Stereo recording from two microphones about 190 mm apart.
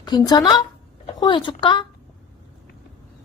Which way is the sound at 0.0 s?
20° left (ahead or behind).